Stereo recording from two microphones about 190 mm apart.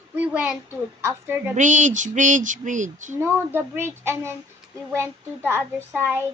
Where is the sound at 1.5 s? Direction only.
40° right (ahead or behind).